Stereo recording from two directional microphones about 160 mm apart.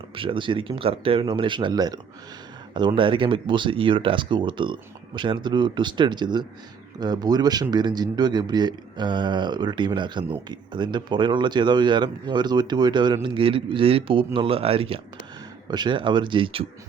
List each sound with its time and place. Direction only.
0.2 s speech: 30° right (ahead or behind)